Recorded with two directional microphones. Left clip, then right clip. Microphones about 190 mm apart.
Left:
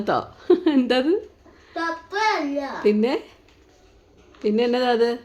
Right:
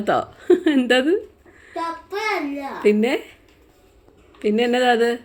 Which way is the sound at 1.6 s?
5° left (ahead or behind).